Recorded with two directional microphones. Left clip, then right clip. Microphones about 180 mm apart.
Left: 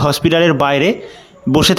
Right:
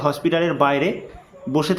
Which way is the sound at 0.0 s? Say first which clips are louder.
Left 7 dB; 45° left (ahead or behind).